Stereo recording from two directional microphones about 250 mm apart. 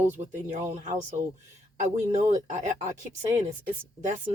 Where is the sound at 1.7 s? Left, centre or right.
Right.